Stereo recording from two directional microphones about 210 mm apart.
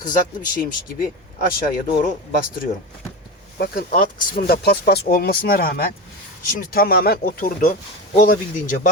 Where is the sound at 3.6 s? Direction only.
45° left (ahead or behind).